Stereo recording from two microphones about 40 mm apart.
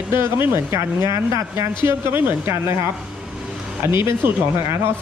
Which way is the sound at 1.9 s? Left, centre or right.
Right.